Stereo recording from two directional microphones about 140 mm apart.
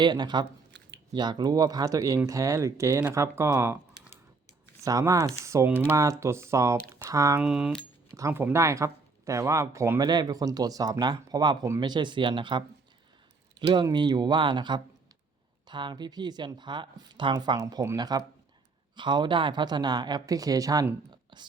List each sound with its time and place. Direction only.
0.0 s speech: 30° right (ahead or behind)
4.8 s speech: 25° right (ahead or behind)
7.3 s speech: 5° right (ahead or behind)
8.1 s speech: 20° right (ahead or behind)
21.1 s a sound: 35° right (ahead or behind)